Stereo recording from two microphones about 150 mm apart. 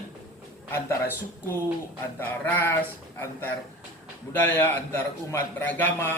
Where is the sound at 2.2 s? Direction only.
15° left (ahead or behind).